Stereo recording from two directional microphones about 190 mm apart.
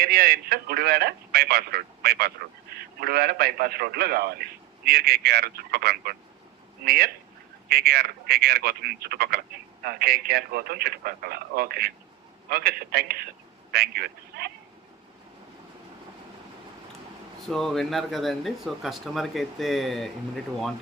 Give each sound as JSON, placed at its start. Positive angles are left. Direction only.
{"t": 0.0, "sound": "speech", "side_deg": -50}
{"t": 17.5, "sound": "speech", "side_deg": 0}